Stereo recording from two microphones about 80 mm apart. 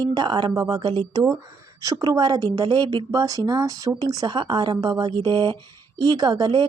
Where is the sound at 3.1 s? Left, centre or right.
Right.